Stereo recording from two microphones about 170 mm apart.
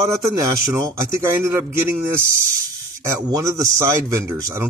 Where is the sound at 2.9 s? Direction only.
15° right (ahead or behind).